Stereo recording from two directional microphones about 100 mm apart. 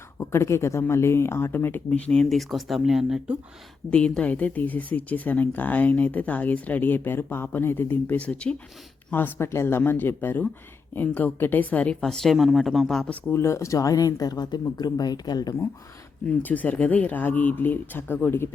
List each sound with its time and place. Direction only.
0.2 s speech: 25° left (ahead or behind)
1.9 s a woman's voice: 10° left (ahead or behind); by 3.3 s 5° right (ahead or behind)
3.8 s a woman's voice: 10° left (ahead or behind)
13.3 s speech: 25° left (ahead or behind); by 15.5 s 40° left (ahead or behind)
16.2 s speech: 15° left (ahead or behind)